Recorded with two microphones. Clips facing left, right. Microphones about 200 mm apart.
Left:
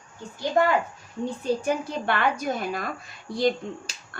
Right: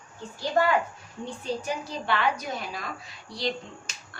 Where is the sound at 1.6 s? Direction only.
55° left (ahead or behind).